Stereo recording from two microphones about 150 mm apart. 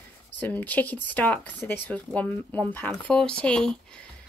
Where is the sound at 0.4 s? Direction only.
10° left (ahead or behind).